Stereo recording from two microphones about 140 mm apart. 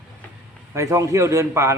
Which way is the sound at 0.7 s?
20° right (ahead or behind).